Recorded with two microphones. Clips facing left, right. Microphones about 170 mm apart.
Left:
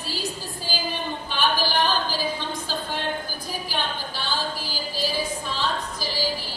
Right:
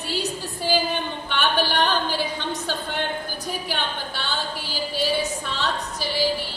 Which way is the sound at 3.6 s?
65° right (ahead or behind).